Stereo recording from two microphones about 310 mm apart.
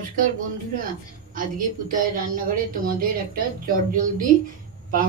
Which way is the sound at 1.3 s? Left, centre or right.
Right.